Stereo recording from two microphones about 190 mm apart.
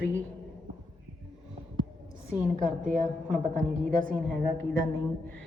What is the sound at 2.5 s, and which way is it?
Speech, 40° right (ahead or behind).